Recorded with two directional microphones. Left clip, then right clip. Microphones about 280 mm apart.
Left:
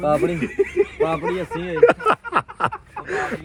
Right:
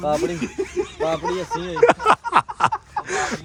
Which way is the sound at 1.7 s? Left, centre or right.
Centre.